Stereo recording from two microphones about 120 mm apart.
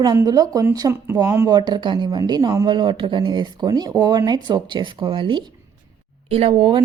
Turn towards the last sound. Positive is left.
turn(degrees=-50)  # may be behind; listen again after turning